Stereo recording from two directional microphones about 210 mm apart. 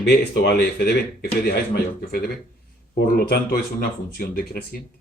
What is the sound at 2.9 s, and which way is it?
Speech, 45° left (ahead or behind).